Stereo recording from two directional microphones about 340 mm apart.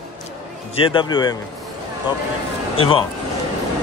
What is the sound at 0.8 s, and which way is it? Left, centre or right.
Speech, centre.